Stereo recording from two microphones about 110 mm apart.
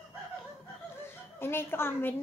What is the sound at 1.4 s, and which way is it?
Speech, 20° left (ahead or behind).